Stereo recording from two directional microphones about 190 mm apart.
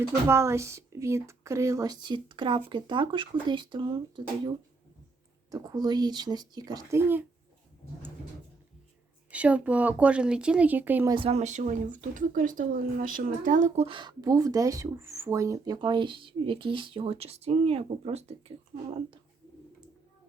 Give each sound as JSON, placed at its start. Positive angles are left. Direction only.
{"t": 0.1, "sound": "speech", "side_deg": -15}
{"t": 9.3, "sound": "speech", "side_deg": -5}
{"t": 11.1, "sound": "speech", "side_deg": -30}